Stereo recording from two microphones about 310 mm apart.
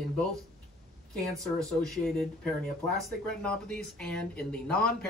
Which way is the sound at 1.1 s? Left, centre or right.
Centre.